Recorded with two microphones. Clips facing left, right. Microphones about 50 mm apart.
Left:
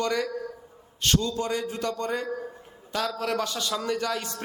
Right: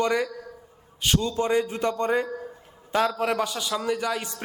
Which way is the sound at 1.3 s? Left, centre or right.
Right.